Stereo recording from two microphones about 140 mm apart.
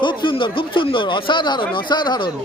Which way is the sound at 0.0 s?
35° left (ahead or behind).